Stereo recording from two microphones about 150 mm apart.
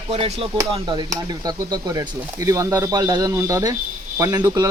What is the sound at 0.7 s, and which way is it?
Speech, 30° right (ahead or behind).